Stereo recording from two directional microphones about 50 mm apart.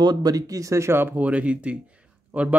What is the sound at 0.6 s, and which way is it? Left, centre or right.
Speech, right.